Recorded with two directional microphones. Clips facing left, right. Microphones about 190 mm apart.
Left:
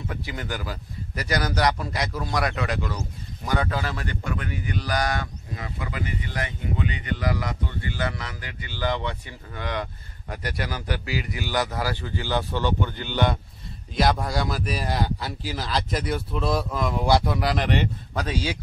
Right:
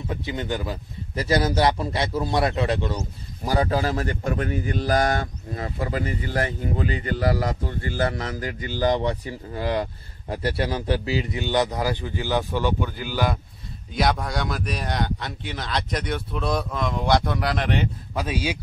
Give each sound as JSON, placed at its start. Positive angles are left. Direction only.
{"t": 0.1, "sound": "a man's voice", "side_deg": -20}